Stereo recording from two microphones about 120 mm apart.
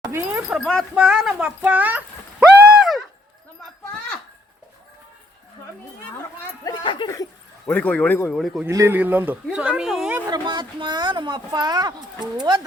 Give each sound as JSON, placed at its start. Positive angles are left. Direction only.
{"t": 0.0, "sound": "a sound", "side_deg": -20}
{"t": 0.5, "sound": "speech", "side_deg": 5}
{"t": 1.0, "sound": "a sound", "side_deg": -5}
{"t": 6.8, "sound": "speech", "side_deg": 45}
{"t": 7.7, "sound": "speech", "side_deg": 15}
{"t": 8.4, "sound": "speech", "side_deg": 0}
{"t": 8.6, "sound": "speech", "side_deg": -20}
{"t": 10.2, "sound": "speech", "side_deg": -35}